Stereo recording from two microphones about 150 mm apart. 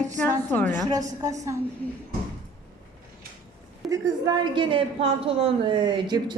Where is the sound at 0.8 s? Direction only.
25° right (ahead or behind).